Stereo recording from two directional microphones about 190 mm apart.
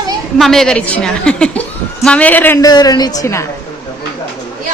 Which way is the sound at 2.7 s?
20° left (ahead or behind).